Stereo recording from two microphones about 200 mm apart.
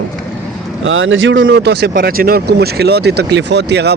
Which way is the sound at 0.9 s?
75° right (ahead or behind).